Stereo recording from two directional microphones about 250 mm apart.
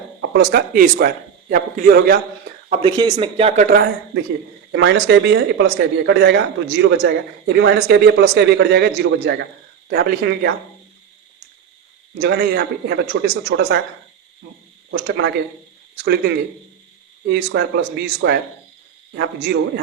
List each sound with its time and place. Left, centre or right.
0.2 s speech: right
2.6 s speech: right
4.7 s a man's voice: right
12.2 s a man's voice: right
17.2 s a man's voice: right